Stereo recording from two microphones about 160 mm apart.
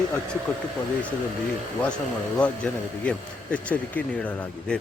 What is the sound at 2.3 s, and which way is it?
Speech, 10° left (ahead or behind).